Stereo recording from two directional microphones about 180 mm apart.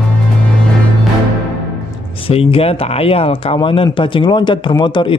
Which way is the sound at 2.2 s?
30° left (ahead or behind).